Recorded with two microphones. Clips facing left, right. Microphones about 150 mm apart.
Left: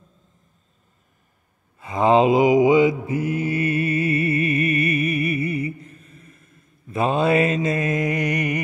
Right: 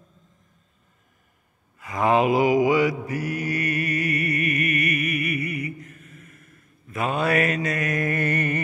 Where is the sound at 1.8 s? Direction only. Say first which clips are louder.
Left 4 dB; 25° left (ahead or behind).